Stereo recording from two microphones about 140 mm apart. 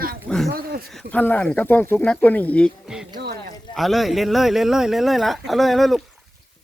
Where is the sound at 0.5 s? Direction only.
90° right.